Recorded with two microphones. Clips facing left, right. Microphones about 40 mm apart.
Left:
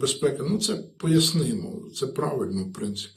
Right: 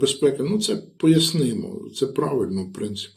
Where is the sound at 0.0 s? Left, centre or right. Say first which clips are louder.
Right 5 dB; right.